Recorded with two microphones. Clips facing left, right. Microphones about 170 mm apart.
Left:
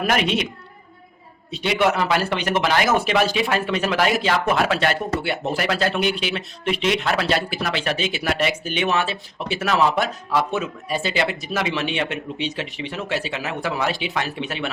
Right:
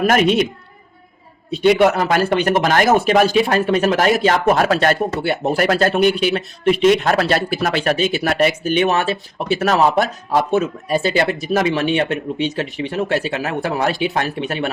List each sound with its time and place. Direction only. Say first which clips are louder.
0.0 s speech: right 7 dB; 45° right (ahead or behind)
1.5 s speech: right 7 dB; 45° right (ahead or behind)